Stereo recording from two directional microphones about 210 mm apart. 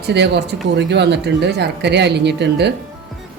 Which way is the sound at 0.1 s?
55° right (ahead or behind).